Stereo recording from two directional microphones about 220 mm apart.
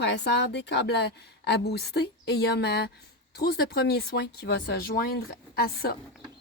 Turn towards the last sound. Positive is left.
turn(degrees=45)  # may be behind; listen again after turning